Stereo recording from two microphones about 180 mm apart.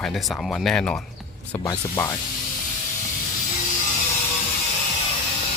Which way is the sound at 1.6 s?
15° left (ahead or behind).